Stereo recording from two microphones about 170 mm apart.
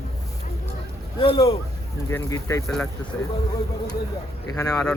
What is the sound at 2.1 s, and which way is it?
Speech, 20° left (ahead or behind).